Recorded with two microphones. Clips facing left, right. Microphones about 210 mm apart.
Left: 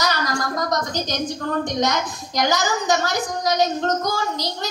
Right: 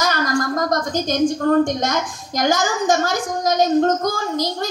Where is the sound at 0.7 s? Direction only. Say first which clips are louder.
Right 4 dB; 50° right (ahead or behind).